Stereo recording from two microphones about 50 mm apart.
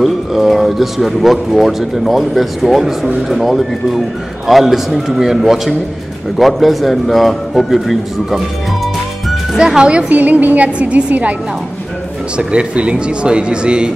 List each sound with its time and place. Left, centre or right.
0.0 s speech: centre
9.6 s speech: centre
12.4 s speech: centre